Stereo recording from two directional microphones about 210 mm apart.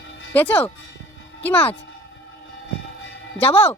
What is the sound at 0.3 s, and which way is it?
Speech, 10° left (ahead or behind).